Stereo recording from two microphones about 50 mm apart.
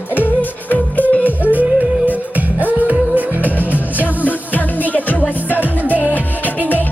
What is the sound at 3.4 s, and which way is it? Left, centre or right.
Music, left.